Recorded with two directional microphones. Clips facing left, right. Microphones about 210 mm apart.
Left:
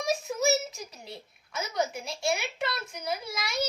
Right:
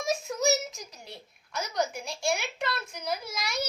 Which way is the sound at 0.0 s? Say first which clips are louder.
Even; centre (ahead or behind).